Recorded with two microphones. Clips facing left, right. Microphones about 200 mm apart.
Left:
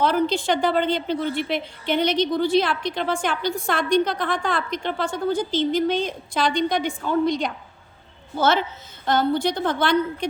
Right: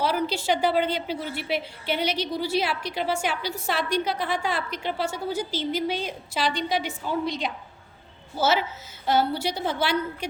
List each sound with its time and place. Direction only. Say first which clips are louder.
0.0 s a woman's voice: left 5 dB; 10° right (ahead or behind)
7.0 s a woman's voice: left 6 dB; 55° left (ahead or behind)
8.4 s a woman's voice: left 3 dB; 5° right (ahead or behind)